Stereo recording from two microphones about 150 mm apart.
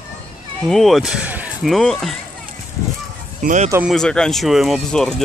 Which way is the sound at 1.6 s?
Centre (ahead or behind).